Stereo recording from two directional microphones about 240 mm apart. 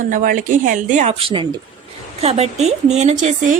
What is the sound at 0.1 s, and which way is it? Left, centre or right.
A woman's voice, right.